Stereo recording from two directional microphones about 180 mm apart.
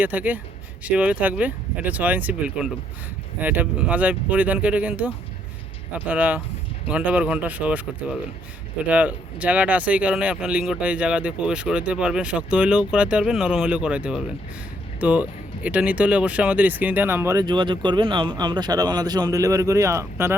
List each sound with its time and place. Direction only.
0.0 s speech: 10° right (ahead or behind)